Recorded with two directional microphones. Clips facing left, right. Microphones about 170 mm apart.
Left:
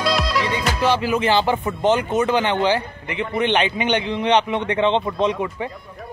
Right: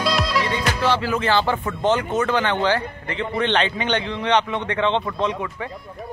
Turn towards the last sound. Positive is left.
turn(degrees=20)  # may be behind; listen again after turning